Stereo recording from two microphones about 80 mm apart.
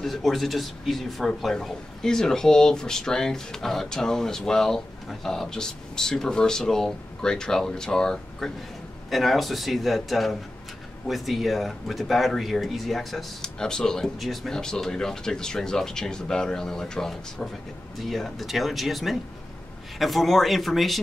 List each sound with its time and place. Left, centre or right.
0.0 s speech: centre